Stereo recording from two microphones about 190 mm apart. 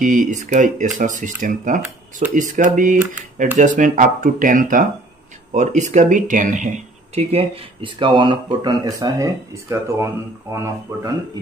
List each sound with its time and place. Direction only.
0.0 s speech: 45° right (ahead or behind); by 11.1 s 15° right (ahead or behind)